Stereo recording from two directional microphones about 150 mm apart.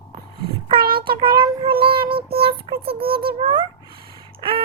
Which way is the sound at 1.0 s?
30° right (ahead or behind).